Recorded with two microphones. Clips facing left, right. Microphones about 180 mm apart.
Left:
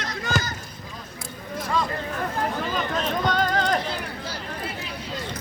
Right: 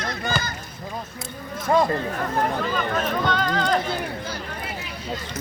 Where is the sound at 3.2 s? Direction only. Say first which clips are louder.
Left 2 dB; 40° left (ahead or behind).